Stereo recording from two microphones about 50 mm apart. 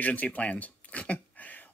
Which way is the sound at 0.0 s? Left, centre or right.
Left.